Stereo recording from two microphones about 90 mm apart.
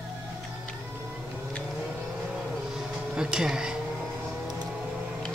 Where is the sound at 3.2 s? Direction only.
10° right (ahead or behind).